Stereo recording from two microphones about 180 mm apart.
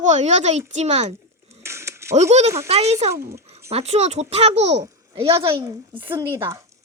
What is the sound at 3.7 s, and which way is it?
A child's voice, 35° right (ahead or behind).